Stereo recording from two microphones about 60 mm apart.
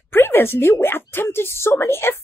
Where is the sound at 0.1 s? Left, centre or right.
Left.